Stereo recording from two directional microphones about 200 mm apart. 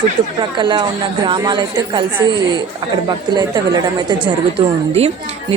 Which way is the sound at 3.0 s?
20° right (ahead or behind).